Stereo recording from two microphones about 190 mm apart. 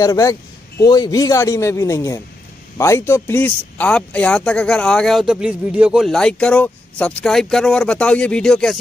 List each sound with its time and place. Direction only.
0.0 s a man's voice: 15° left (ahead or behind)